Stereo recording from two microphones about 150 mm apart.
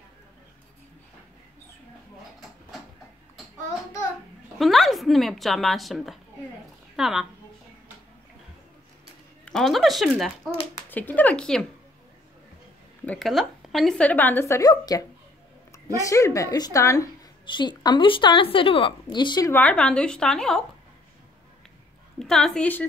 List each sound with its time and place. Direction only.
4.6 s speech: centre (ahead or behind)
9.4 s speech: centre (ahead or behind)
10.9 s speech: 10° left (ahead or behind)
13.0 s a woman's voice: 5° left (ahead or behind); by 19.5 s 30° left (ahead or behind)
19.5 s speech: 10° left (ahead or behind)
22.2 s speech: 5° left (ahead or behind)